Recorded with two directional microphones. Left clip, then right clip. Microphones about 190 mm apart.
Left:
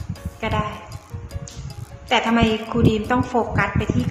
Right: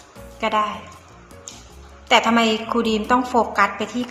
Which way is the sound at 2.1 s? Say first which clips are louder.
Right 3 dB; 15° left (ahead or behind).